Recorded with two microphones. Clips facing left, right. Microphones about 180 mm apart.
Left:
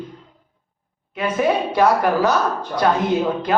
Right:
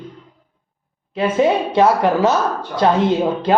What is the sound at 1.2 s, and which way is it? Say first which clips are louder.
Speech: right 3 dB; 25° right (ahead or behind).